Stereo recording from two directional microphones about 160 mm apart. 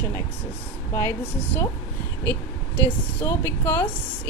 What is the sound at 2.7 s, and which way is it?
A woman's voice, 15° left (ahead or behind).